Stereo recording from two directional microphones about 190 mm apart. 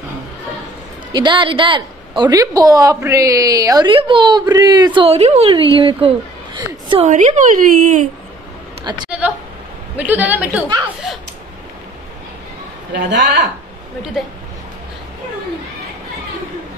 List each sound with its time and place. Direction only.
1.1 s a woman's voice: 25° right (ahead or behind)
7.1 s speech: 40° right (ahead or behind)
8.8 s a sound: 25° right (ahead or behind)
9.9 s a man's voice: 10° right (ahead or behind)
13.1 s a woman's voice: 65° right (ahead or behind)